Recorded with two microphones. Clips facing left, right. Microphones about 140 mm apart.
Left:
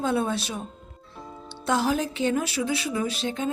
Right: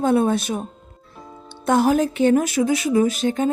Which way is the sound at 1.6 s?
50° right (ahead or behind).